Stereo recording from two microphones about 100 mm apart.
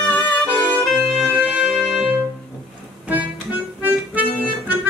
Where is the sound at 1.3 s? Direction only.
15° right (ahead or behind).